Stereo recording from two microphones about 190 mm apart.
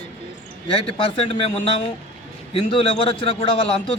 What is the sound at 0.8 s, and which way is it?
A man's voice, 30° left (ahead or behind).